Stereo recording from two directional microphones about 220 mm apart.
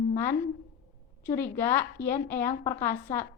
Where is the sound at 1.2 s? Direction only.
10° left (ahead or behind).